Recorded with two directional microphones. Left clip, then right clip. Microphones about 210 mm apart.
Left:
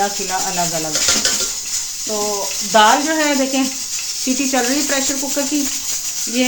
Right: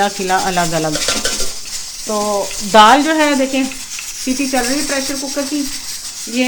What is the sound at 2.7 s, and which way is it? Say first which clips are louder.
Speech: right 4 dB; 55° right (ahead or behind).